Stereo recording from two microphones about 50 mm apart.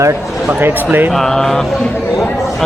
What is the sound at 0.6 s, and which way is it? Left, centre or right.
Speech, right.